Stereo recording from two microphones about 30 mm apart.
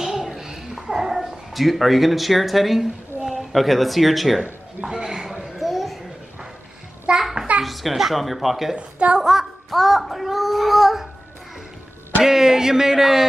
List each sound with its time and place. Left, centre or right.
0.0 s a sound: centre
1.0 s dog: centre
1.5 s a child's voice: centre
4.4 s a sound: right
7.1 s a sound: right
7.6 s speech: centre
8.7 s a woman's voice: right
9.2 s a child's voice: centre
12.2 s speech: centre